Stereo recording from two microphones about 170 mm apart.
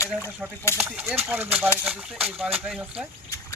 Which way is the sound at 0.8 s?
10° right (ahead or behind).